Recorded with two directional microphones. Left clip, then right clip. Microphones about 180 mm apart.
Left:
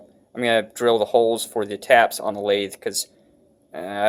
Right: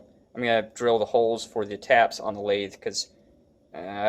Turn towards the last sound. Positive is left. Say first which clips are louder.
# left 6 dB
turn(degrees=30)  # may be behind; listen again after turning